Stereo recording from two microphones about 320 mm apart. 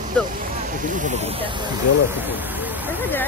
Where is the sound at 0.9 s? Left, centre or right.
Right.